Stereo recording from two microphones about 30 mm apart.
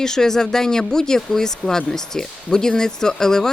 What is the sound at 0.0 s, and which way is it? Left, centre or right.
Speech, centre.